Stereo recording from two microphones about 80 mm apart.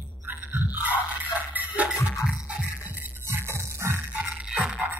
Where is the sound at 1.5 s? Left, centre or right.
Right.